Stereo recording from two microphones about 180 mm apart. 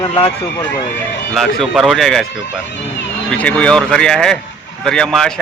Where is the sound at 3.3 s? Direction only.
5° left (ahead or behind).